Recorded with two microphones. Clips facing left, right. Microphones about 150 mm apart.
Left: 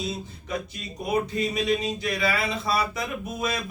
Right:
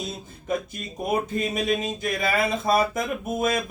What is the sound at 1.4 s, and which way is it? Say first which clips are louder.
Speech: even; 50° right (ahead or behind).